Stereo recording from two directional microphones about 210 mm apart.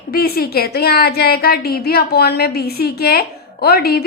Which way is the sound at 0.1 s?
45° left (ahead or behind).